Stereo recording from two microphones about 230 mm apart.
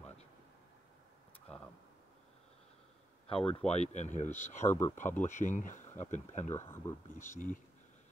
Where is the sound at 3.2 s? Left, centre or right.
Left.